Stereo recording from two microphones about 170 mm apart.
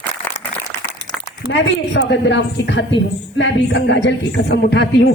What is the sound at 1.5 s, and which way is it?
A woman's voice, 90° left.